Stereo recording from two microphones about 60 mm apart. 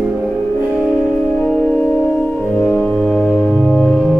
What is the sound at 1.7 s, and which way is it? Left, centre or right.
Music, left.